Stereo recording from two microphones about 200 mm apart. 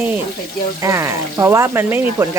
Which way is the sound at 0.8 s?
15° right (ahead or behind).